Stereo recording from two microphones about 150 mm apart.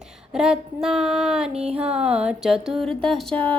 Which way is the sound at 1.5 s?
45° right (ahead or behind).